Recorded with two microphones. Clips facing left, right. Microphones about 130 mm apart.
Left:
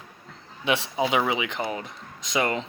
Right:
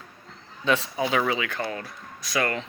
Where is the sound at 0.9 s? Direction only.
20° left (ahead or behind).